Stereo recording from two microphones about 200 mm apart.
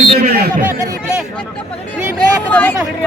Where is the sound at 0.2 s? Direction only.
50° right (ahead or behind).